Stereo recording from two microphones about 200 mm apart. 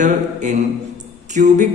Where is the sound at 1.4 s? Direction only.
40° right (ahead or behind).